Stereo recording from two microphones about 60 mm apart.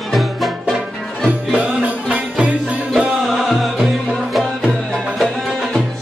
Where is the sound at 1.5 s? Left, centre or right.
Right.